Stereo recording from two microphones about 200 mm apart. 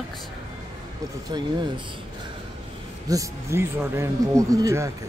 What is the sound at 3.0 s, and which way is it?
A woman's voice, 15° right (ahead or behind).